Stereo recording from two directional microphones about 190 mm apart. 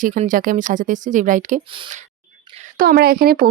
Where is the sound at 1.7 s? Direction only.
25° right (ahead or behind).